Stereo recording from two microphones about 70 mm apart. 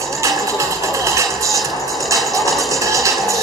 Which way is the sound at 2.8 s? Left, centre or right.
Right.